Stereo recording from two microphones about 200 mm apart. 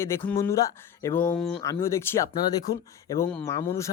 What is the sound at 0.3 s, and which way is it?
Speech, 15° left (ahead or behind).